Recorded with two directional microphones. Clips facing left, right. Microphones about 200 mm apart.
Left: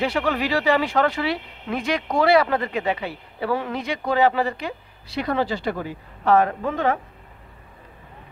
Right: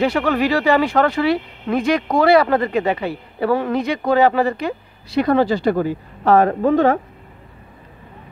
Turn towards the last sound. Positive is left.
turn(degrees=-40)  # may be behind; listen again after turning